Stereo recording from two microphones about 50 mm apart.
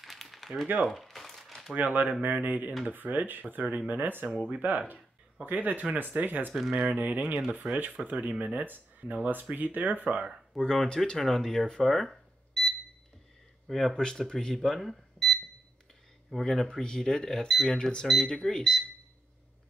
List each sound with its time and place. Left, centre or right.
0.0 s a sound: centre
0.8 s crumpling: centre
1.7 s speech: right
10.6 s speech: centre
11.9 s cash register: centre
13.7 s speech: centre
13.9 s speech: centre
16.3 s speech: centre